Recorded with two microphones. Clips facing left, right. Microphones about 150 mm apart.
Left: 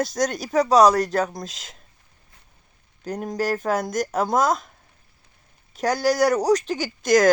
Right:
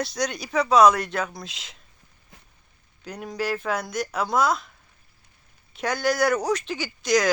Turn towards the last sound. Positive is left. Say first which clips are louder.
# left 4 dB
turn(degrees=50)  # may be behind; listen again after turning